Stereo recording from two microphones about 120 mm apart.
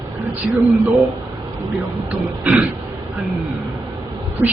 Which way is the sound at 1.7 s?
15° right (ahead or behind).